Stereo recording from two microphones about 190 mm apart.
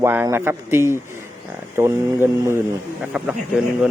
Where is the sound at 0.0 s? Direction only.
10° right (ahead or behind).